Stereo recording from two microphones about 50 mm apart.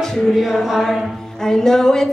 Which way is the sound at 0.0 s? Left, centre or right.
Centre.